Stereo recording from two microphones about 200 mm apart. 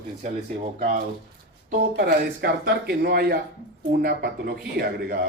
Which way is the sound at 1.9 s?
50° right (ahead or behind).